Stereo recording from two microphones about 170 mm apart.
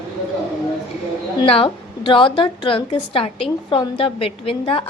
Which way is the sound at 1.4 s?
30° left (ahead or behind).